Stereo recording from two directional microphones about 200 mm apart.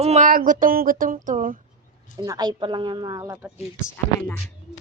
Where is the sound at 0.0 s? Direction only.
35° right (ahead or behind).